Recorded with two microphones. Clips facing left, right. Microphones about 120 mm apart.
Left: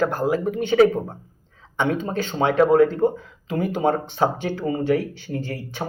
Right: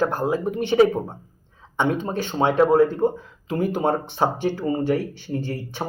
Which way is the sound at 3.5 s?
40° right (ahead or behind).